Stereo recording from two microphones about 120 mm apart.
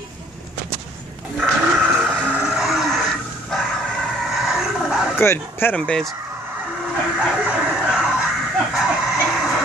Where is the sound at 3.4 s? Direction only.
5° left (ahead or behind).